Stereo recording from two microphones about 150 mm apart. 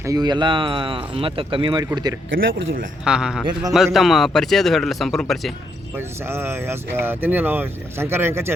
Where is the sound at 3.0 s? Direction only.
5° right (ahead or behind).